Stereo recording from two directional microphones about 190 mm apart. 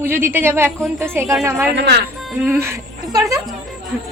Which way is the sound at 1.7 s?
60° right (ahead or behind).